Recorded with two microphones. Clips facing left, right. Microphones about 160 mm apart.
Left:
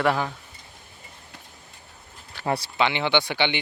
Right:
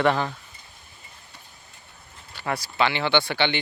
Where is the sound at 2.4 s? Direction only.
30° left (ahead or behind).